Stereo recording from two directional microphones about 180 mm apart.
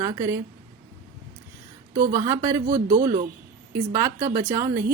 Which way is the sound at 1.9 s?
50° right (ahead or behind).